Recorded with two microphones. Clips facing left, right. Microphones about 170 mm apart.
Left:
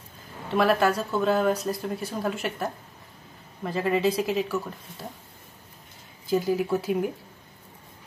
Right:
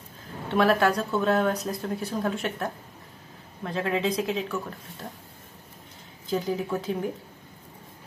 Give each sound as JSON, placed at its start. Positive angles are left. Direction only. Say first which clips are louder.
{"t": 0.5, "sound": "speech", "louder": "even", "side_deg": 0}
{"t": 6.2, "sound": "speech", "louder": "left 3 dB", "side_deg": 5}